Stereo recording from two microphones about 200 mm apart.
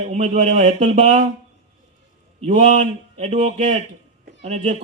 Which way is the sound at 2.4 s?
35° right (ahead or behind).